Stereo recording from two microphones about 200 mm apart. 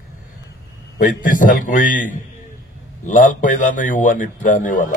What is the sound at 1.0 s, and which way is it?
A man's voice, 40° left (ahead or behind).